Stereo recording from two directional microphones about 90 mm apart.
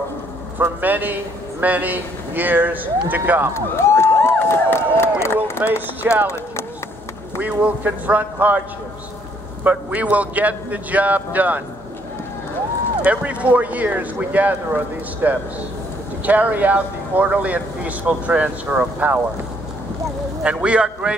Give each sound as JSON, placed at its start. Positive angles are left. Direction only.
{"t": 0.6, "sound": "speech", "side_deg": -20}
{"t": 3.5, "sound": "a sound", "side_deg": 30}
{"t": 5.6, "sound": "speech", "side_deg": -20}
{"t": 7.3, "sound": "speech", "side_deg": -20}
{"t": 9.7, "sound": "speech", "side_deg": -15}
{"t": 13.0, "sound": "speech", "side_deg": -15}
{"t": 20.4, "sound": "speech", "side_deg": -10}